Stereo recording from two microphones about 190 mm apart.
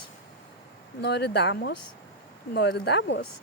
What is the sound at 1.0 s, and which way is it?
Speech, 60° left (ahead or behind).